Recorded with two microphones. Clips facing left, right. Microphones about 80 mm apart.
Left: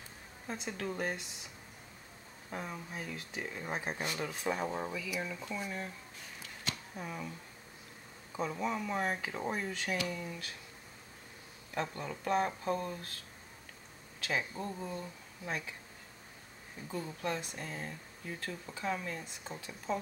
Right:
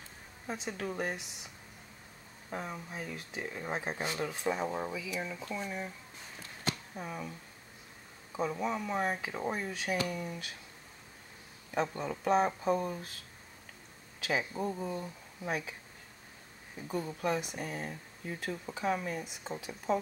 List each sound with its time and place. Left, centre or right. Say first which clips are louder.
0.5 s speech: right 1 dB; centre
2.5 s speech: right 2 dB; centre
7.0 s speech: right 1 dB; centre
10.0 s speech: right 2 dB; centre
11.7 s speech: right 4 dB; centre
14.2 s speech: right 3 dB; centre
16.8 s speech: right 4 dB; centre